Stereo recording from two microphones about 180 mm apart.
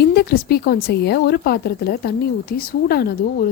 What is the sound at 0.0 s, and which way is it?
Speech, 60° left (ahead or behind).